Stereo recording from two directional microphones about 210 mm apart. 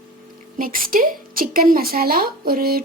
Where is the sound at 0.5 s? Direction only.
40° right (ahead or behind).